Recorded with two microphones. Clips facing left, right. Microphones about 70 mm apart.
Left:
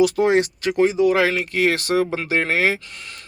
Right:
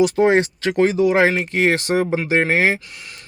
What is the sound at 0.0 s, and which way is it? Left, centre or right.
Speech, right.